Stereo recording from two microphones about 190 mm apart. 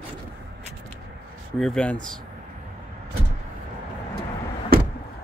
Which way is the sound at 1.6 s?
5° left (ahead or behind).